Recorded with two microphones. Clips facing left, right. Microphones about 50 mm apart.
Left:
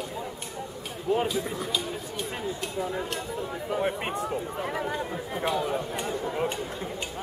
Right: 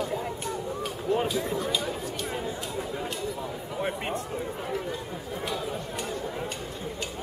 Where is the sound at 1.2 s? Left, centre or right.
Centre.